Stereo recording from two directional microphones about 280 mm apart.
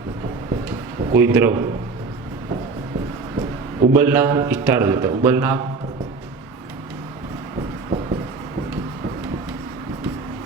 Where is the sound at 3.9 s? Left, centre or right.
Centre.